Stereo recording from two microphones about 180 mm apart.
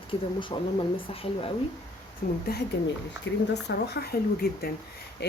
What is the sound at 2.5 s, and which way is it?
Speech, 60° left (ahead or behind).